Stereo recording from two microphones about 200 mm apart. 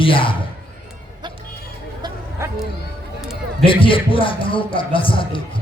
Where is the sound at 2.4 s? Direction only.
15° right (ahead or behind).